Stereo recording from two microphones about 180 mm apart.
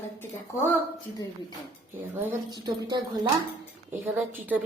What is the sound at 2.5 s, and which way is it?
Speech, 20° right (ahead or behind).